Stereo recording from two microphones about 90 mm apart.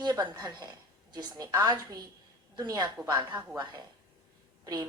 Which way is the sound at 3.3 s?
20° right (ahead or behind).